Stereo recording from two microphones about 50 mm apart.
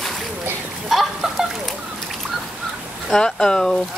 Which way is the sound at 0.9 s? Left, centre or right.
Centre.